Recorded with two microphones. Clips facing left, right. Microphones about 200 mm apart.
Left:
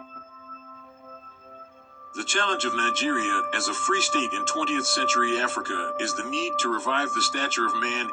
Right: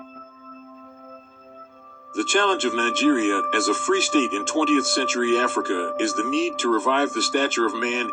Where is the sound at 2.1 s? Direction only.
55° right (ahead or behind).